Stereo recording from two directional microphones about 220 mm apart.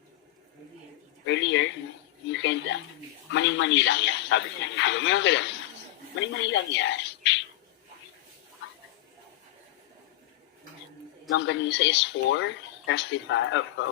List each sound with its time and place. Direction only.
1.3 s speech: 55° left (ahead or behind)
11.3 s speech: 55° left (ahead or behind)